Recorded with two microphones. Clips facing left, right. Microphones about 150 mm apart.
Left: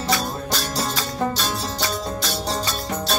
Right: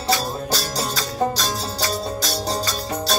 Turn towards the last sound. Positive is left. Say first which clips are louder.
# right 1 dB
turn(degrees=-40)  # may be behind; listen again after turning